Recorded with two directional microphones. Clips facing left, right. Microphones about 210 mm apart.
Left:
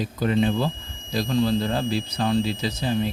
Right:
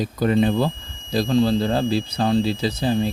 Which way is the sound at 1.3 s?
30° right (ahead or behind).